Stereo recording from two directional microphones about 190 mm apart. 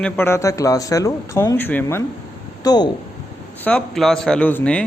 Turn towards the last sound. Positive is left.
turn(degrees=5)  # may be behind; listen again after turning